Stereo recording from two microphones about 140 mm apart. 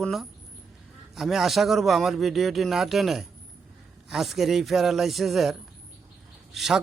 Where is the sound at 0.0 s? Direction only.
Centre (ahead or behind).